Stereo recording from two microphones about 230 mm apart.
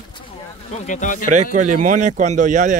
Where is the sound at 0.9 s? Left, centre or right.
Left.